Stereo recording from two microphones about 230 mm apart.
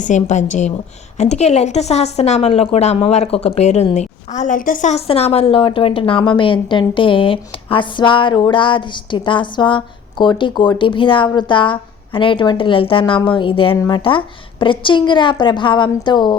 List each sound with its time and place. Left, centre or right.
0.0 s a woman's voice: left